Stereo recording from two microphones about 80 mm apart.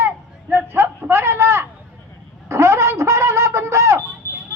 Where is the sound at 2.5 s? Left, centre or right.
Right.